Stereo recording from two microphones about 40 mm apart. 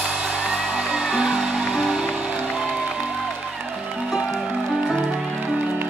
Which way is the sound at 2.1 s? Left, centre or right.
Right.